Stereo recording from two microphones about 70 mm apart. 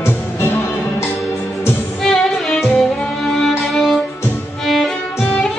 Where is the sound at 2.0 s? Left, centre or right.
Centre.